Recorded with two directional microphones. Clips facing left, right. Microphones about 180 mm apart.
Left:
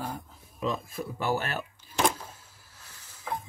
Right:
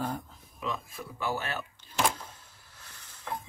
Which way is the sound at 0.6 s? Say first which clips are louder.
Left 5 dB; 40° left (ahead or behind).